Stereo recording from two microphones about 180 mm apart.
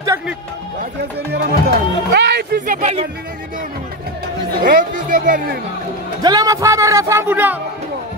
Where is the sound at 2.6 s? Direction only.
45° right (ahead or behind).